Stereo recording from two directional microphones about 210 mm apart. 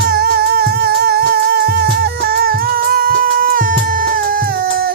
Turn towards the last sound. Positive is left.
turn(degrees=-45)  # may be behind; listen again after turning